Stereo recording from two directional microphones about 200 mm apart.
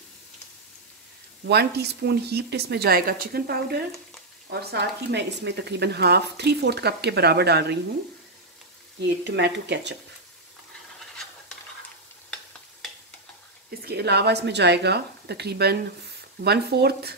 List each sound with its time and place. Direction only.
1.4 s speech: 55° right (ahead or behind)
9.0 s speech: 60° right (ahead or behind)
13.8 s speech: 55° right (ahead or behind)